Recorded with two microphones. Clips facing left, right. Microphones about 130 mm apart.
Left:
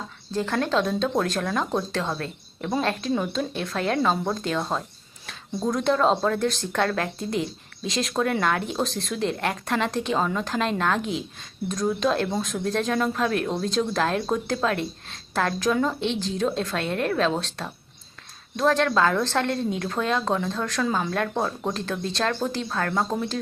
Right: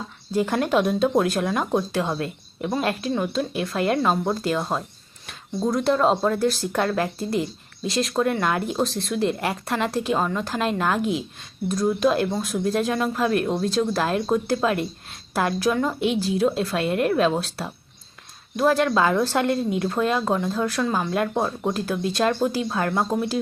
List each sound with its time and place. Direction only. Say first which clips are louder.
0.3 s speech: right 3 dB; 15° right (ahead or behind)